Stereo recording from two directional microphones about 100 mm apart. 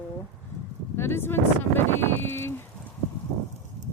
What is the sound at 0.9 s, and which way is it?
Speech, 25° left (ahead or behind).